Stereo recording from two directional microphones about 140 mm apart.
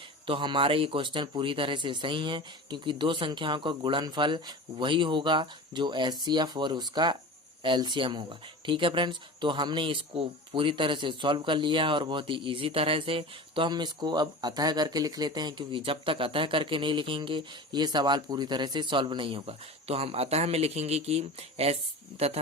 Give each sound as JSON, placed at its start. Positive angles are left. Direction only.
{"t": 0.3, "sound": "speech", "side_deg": -35}